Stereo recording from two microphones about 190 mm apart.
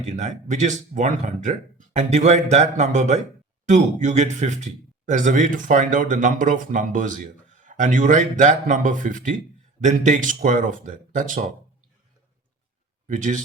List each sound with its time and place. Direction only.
0.2 s speech: 40° right (ahead or behind)
13.1 s speech: 40° right (ahead or behind)